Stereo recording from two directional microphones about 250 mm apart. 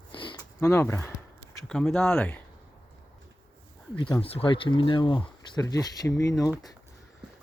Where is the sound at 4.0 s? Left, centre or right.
Centre.